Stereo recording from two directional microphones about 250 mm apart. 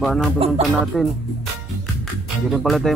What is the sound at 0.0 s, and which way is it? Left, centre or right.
Speech, centre.